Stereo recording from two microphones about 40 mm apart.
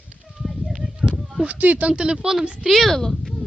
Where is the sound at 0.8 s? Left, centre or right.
Right.